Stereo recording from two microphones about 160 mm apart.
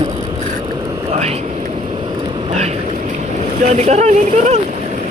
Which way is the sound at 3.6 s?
45° right (ahead or behind).